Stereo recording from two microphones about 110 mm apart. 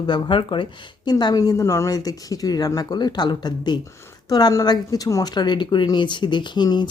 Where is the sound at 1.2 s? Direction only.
35° left (ahead or behind).